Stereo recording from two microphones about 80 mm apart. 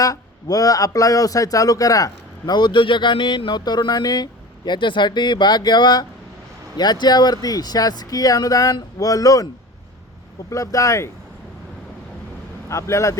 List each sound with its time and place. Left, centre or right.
0.0 s speech: left
2.6 s speech: left
10.5 s speech: left
12.6 s speech: left